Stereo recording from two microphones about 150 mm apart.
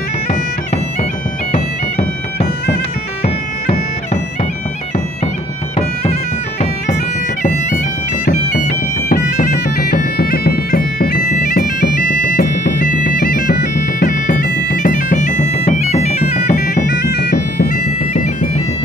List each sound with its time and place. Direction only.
1.5 s bagpipes: 45° left (ahead or behind)
9.1 s bagpipes: 60° left (ahead or behind)
16.4 s bagpipes: 65° left (ahead or behind)
18.1 s bagpipes: 50° left (ahead or behind)